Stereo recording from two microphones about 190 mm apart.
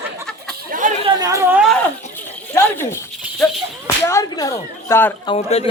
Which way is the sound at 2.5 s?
10° left (ahead or behind).